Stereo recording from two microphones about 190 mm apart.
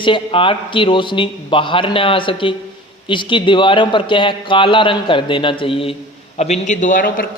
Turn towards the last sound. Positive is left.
turn(degrees=45)  # may be behind; listen again after turning